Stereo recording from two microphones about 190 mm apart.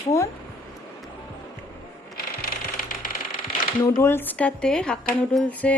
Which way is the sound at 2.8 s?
45° left (ahead or behind).